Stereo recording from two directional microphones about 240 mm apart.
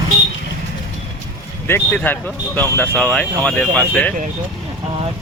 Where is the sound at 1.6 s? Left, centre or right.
Centre.